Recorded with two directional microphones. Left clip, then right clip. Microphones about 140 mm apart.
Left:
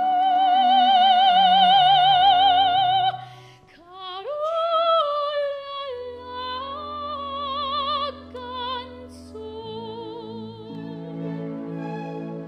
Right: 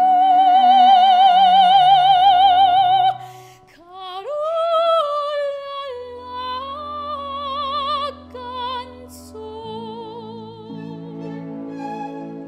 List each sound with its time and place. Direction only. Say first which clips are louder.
0.0 s music: right 6 dB; 40° right (ahead or behind)
4.0 s singing: right 3 dB; 40° right (ahead or behind)
9.7 s music: right 3 dB; 45° right (ahead or behind)